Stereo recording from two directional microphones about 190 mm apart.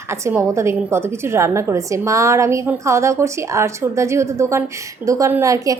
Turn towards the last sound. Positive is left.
turn(degrees=-15)  # may be behind; listen again after turning